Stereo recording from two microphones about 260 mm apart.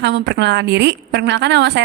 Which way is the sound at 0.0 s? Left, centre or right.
Right.